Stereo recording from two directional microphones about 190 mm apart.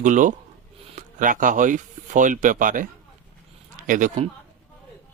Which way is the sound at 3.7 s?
45° right (ahead or behind).